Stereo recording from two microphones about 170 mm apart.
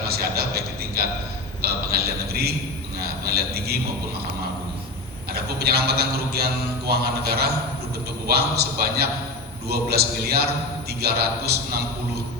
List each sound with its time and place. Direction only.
0.1 s a sound: 65° right (ahead or behind)
1.6 s mantra: 65° right (ahead or behind)
5.3 s mantra: 65° right (ahead or behind)